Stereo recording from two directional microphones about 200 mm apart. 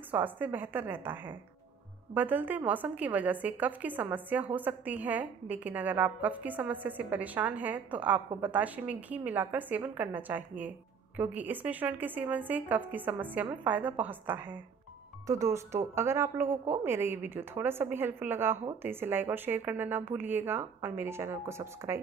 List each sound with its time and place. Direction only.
0.1 s a woman's voice: 10° right (ahead or behind)